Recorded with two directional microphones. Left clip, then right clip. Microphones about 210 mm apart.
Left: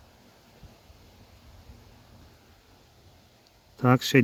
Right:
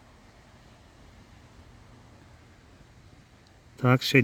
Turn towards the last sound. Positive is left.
turn(degrees=0)  # may be behind; listen again after turning